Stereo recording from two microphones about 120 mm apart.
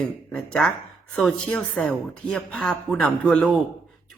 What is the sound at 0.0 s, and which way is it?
Speech, 5° left (ahead or behind).